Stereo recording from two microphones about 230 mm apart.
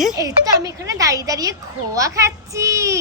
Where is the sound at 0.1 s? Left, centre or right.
Centre.